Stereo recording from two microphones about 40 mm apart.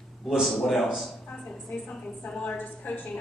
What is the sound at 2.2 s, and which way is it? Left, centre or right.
Speech, left.